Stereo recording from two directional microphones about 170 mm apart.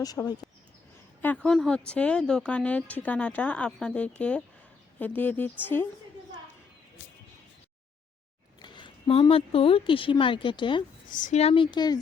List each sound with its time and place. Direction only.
0.2 s a woman's voice: 10° left (ahead or behind)
8.6 s speech: 25° left (ahead or behind)
11.1 s speech: 45° left (ahead or behind); by 11.9 s 25° left (ahead or behind)